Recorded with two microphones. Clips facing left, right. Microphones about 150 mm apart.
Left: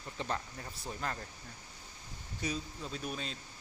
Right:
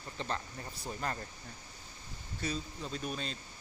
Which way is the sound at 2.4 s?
10° left (ahead or behind).